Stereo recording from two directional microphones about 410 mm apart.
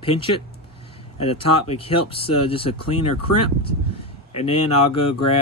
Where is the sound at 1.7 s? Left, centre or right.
Centre.